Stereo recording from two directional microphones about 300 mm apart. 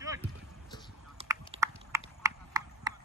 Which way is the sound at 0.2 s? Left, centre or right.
Centre.